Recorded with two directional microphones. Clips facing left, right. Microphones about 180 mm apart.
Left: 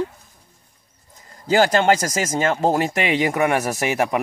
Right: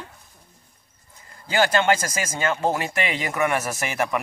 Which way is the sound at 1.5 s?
40° left (ahead or behind).